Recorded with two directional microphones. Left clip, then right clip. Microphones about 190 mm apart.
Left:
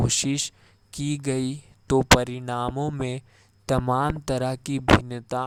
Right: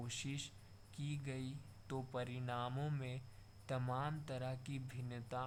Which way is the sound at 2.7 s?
25° left (ahead or behind).